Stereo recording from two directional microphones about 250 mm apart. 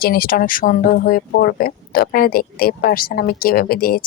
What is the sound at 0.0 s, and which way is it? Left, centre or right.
Speech, left.